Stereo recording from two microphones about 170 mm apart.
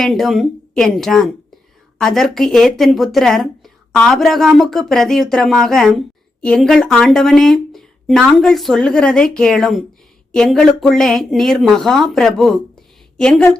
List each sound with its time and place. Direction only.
0.0 s speech: centre (ahead or behind)